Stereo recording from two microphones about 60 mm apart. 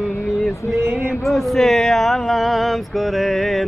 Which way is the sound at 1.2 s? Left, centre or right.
Centre.